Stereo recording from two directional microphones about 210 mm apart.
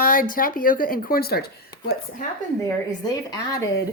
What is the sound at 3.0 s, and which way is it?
Speech, 15° left (ahead or behind).